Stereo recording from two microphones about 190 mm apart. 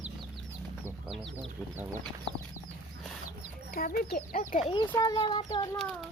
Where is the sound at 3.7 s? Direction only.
50° left (ahead or behind).